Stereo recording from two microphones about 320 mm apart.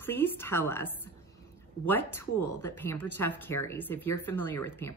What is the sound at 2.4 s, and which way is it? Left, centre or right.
Speech, left.